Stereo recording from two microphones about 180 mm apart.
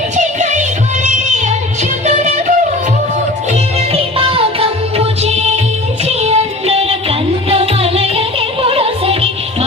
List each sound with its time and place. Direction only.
0.2 s music: 40° right (ahead or behind)
2.0 s music: 40° right (ahead or behind)
3.9 s music: 30° right (ahead or behind)